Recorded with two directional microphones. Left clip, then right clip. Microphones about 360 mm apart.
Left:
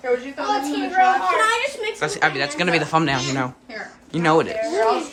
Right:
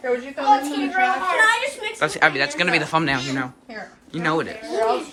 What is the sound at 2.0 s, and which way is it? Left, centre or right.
Speech, centre.